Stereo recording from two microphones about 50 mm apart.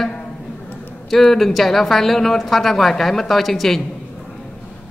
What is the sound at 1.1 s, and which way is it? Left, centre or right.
A man's voice, centre.